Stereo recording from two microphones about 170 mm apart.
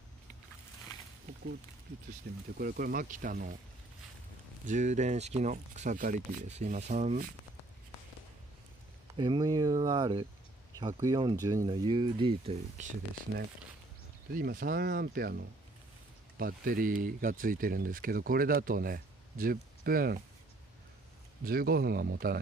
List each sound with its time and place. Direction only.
2.3 s speech: 60° right (ahead or behind)
4.6 s speech: 45° right (ahead or behind)
9.1 s speech: 25° right (ahead or behind)
14.3 s speech: 55° right (ahead or behind)
21.5 s speech: 60° right (ahead or behind)